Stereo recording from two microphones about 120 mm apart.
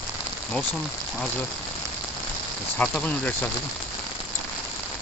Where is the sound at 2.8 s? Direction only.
10° left (ahead or behind).